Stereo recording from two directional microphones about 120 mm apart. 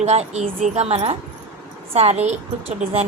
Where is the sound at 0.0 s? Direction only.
65° right (ahead or behind).